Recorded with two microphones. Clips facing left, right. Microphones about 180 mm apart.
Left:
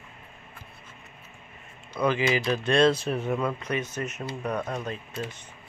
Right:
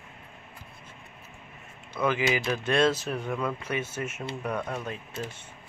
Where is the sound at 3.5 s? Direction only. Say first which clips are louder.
Left 2 dB; 10° right (ahead or behind).